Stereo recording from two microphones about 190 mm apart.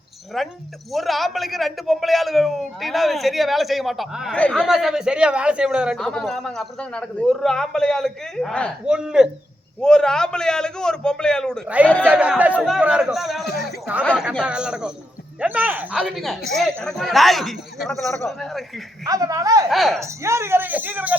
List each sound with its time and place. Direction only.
0.3 s a man's voice: centre (ahead or behind)
19.0 s a man's voice: 20° right (ahead or behind)
19.6 s a man's voice: centre (ahead or behind)
20.0 s speech: 15° right (ahead or behind)